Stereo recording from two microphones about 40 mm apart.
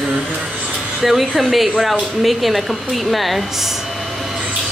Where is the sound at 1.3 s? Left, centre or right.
Centre.